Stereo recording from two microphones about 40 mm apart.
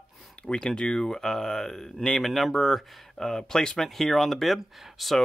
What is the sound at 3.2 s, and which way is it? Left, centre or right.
Speech, centre.